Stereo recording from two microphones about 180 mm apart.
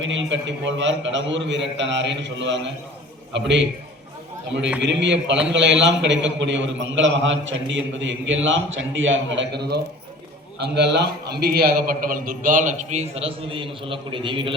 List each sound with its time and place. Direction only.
0.0 s a man's voice: 90° right
4.8 s a man's voice: 80° right; by 14.5 s 30° right (ahead or behind)